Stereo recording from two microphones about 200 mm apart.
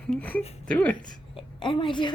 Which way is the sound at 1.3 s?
25° left (ahead or behind).